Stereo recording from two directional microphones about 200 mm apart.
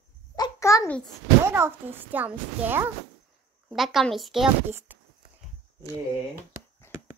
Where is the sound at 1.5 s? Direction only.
10° right (ahead or behind).